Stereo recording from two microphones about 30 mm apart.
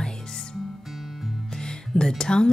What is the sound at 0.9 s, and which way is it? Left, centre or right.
Music, centre.